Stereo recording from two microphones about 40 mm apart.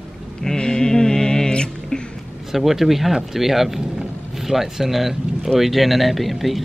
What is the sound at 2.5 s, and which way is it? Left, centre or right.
Speech, centre.